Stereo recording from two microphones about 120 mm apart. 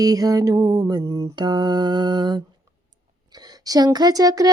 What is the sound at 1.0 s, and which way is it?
Child singing, 25° right (ahead or behind).